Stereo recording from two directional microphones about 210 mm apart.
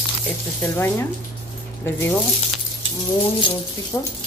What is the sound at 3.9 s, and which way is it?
Speech, 10° left (ahead or behind).